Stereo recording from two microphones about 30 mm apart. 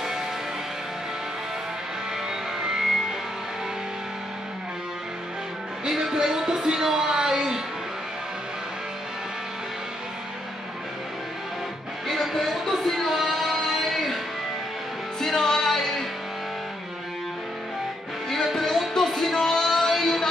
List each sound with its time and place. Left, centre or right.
2.6 s music: right
5.9 s a sound: centre
12.1 s music: centre
12.8 s child singing: centre
13.1 s music: centre
15.1 s music: centre
18.3 s music: centre
19.6 s a sound: centre